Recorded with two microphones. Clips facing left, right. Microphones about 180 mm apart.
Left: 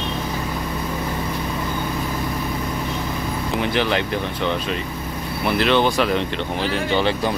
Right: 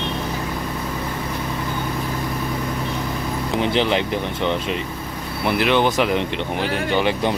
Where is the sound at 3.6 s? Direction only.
20° right (ahead or behind).